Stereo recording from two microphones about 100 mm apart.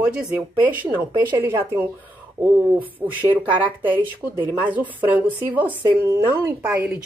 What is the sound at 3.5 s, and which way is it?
Speech, 55° right (ahead or behind).